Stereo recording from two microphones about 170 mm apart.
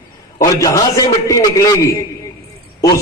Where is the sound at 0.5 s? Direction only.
20° left (ahead or behind).